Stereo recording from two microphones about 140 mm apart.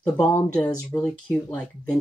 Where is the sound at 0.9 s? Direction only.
10° left (ahead or behind).